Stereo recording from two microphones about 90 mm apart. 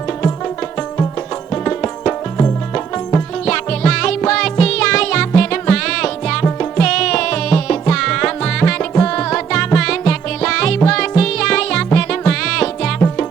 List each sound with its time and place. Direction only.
0.4 s music: 20° left (ahead or behind)
3.4 s music: 10° left (ahead or behind)